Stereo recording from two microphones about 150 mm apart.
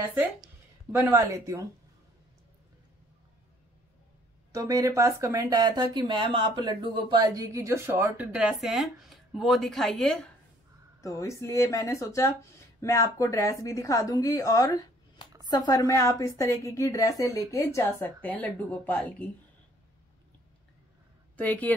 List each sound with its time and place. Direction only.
0.1 s a woman's voice: 10° right (ahead or behind)
4.6 s speech: 20° right (ahead or behind); by 10.3 s centre (ahead or behind)
11.0 s a woman's voice: 20° left (ahead or behind)
21.4 s speech: 10° left (ahead or behind)